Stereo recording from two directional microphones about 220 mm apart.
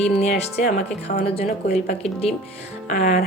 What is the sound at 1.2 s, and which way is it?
Speech, 25° left (ahead or behind).